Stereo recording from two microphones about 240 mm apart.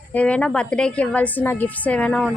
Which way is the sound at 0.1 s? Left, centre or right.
Centre.